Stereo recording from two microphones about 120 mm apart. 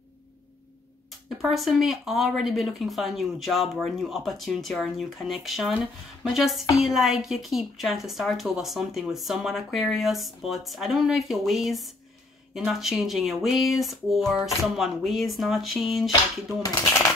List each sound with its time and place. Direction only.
1.4 s a woman's voice: centre (ahead or behind)